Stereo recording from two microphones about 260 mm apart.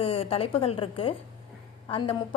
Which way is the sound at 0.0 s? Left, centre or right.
Left.